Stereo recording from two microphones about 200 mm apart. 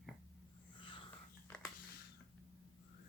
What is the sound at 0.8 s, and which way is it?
Wheeze, 25° left (ahead or behind).